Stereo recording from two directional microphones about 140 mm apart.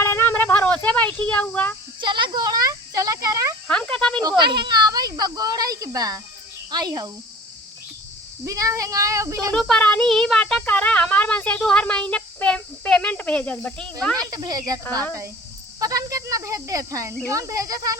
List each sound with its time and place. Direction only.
0.0 s a sound: 15° left (ahead or behind)
2.0 s a sound: 35° right (ahead or behind)
3.7 s insect: 5° left (ahead or behind)
4.2 s a sound: 30° right (ahead or behind)
6.7 s speech: 30° right (ahead or behind)
8.4 s speech: 25° right (ahead or behind)
9.5 s speech: 5° left (ahead or behind)
14.2 s speech: 25° right (ahead or behind)
15.8 s speech: 25° right (ahead or behind)